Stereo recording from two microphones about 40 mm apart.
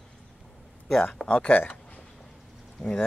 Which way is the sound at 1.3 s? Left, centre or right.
Left.